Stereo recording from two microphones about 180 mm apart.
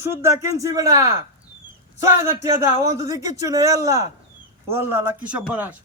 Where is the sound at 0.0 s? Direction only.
15° right (ahead or behind).